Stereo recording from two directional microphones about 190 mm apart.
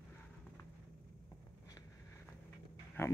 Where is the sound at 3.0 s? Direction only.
10° left (ahead or behind).